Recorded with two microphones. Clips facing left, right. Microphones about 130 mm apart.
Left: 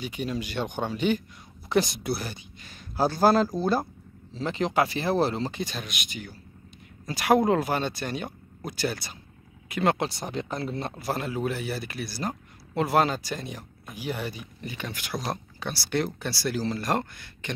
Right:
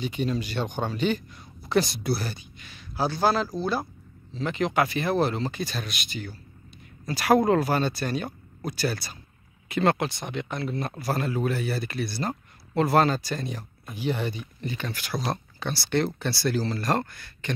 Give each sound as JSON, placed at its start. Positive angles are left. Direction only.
{"t": 0.0, "sound": "speech", "side_deg": 10}
{"t": 2.6, "sound": "a man's voice", "side_deg": 45}
{"t": 4.3, "sound": "speech", "side_deg": 30}
{"t": 9.9, "sound": "speech", "side_deg": 35}
{"t": 11.0, "sound": "speech", "side_deg": 15}